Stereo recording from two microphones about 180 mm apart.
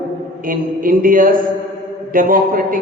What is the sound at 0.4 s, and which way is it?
A man's voice, 50° right (ahead or behind).